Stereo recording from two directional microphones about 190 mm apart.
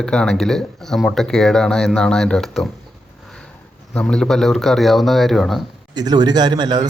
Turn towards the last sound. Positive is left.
turn(degrees=-20)  # may be behind; listen again after turning